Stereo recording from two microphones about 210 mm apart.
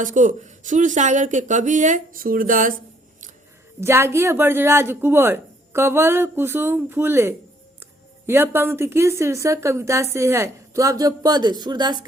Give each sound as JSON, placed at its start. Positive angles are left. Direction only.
{"t": 0.0, "sound": "speech", "side_deg": -40}
{"t": 3.8, "sound": "a woman's voice", "side_deg": -10}